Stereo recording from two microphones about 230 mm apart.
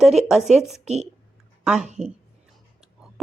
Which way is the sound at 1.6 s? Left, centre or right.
Centre.